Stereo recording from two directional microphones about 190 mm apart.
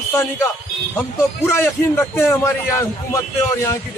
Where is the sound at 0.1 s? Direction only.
15° left (ahead or behind).